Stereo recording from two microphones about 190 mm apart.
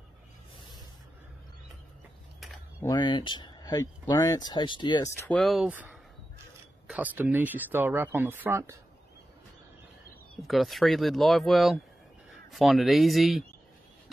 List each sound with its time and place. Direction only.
2.8 s speech: 20° left (ahead or behind)
5.4 s speech: centre (ahead or behind)
10.4 s speech: centre (ahead or behind)